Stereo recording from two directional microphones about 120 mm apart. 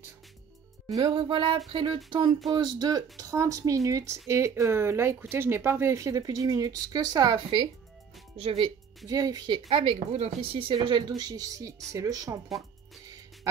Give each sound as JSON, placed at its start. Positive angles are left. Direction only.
{"t": 0.8, "sound": "music", "side_deg": -30}
{"t": 1.1, "sound": "speech", "side_deg": -45}
{"t": 8.4, "sound": "speech", "side_deg": -55}
{"t": 8.6, "sound": "speech", "side_deg": -30}
{"t": 9.7, "sound": "speech", "side_deg": -50}